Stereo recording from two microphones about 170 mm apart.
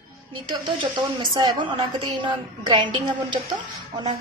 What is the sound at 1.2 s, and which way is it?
A woman's voice, 25° right (ahead or behind).